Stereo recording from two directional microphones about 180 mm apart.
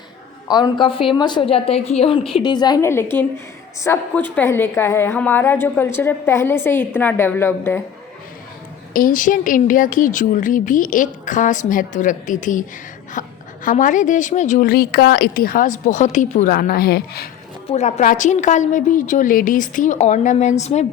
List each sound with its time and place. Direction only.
0.4 s a woman's voice: 20° left (ahead or behind)
8.9 s speech: 50° left (ahead or behind)
17.7 s speech: 40° left (ahead or behind)